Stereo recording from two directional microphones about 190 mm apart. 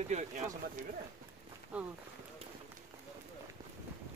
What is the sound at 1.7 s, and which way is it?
Speech, 5° right (ahead or behind).